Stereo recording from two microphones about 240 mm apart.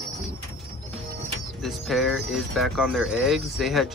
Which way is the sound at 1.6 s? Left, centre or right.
Centre.